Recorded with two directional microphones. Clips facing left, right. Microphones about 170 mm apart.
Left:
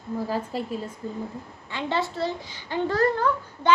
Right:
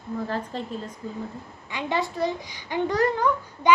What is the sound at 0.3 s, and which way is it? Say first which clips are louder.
Speech: left 2 dB; 10° left (ahead or behind).